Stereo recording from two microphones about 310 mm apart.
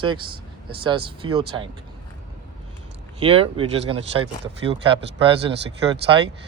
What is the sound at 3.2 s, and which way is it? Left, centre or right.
Speech, centre.